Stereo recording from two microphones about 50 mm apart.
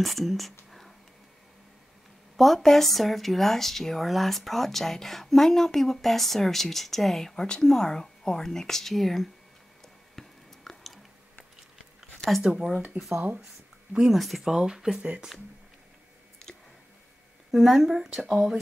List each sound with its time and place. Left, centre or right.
0.0 s speech: centre
0.7 s whispering: centre
2.3 s speech: centre
10.1 s chewing: centre
12.2 s speech: centre
12.9 s speech: right
14.1 s speech: centre
14.4 s speech: centre
16.4 s a sound: centre
17.5 s speech: centre